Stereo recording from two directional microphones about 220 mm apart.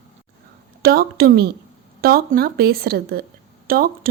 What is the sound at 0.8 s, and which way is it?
A woman's voice, 45° right (ahead or behind).